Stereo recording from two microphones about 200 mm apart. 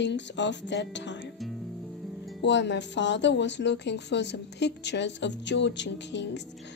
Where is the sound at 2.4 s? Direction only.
65° left (ahead or behind).